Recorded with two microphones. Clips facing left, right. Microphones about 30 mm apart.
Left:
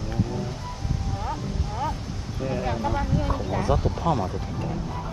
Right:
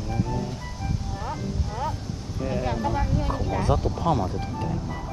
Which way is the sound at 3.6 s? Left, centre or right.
Left.